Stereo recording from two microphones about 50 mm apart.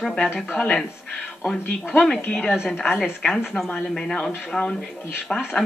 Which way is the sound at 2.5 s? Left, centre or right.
Centre.